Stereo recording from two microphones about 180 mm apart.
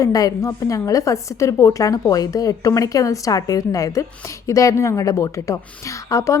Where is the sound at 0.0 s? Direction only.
20° left (ahead or behind).